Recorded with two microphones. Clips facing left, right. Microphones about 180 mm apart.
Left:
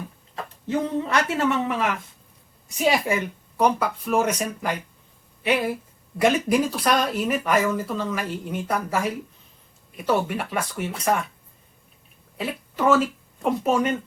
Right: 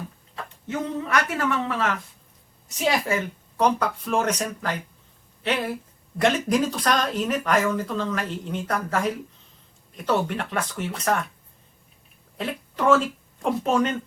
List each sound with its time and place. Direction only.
0.7 s a woman's voice: 30° left (ahead or behind); by 11.3 s 10° left (ahead or behind)
12.4 s speech: 5° left (ahead or behind)